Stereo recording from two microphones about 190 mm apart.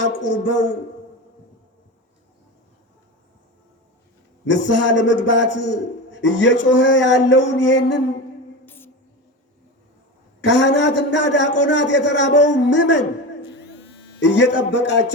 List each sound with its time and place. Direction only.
0.0 s a man's voice: 70° left (ahead or behind)
4.5 s a man's voice: 75° left (ahead or behind)
8.6 s a sound: 10° left (ahead or behind)
10.4 s a man's voice: 70° left (ahead or behind)
14.2 s a man's voice: 70° left (ahead or behind)